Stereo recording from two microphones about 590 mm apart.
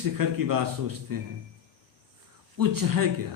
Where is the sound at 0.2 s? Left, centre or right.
Right.